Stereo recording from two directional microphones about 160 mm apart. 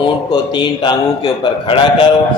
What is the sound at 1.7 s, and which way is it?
Speech, 30° left (ahead or behind).